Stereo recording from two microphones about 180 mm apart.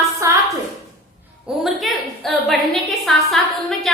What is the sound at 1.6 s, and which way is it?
A woman's voice, centre (ahead or behind).